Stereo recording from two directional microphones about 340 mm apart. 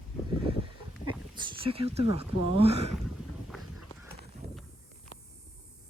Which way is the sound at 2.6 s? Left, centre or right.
Centre.